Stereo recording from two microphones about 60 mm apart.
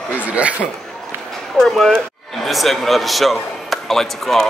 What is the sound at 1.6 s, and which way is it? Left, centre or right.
Speech, centre.